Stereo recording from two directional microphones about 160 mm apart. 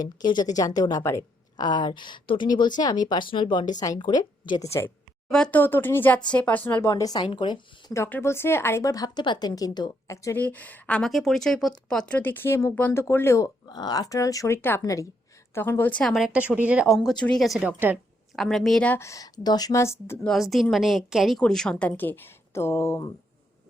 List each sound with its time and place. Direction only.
0.0 s a woman's voice: 25° left (ahead or behind)
5.3 s a woman's voice: 5° left (ahead or behind)
6.9 s a woman's voice: 25° left (ahead or behind)
7.9 s a woman's voice: 15° left (ahead or behind); by 18.0 s 10° right (ahead or behind)
18.3 s a woman's voice: centre (ahead or behind)
20.2 s a woman's voice: centre (ahead or behind); by 23.1 s 20° left (ahead or behind)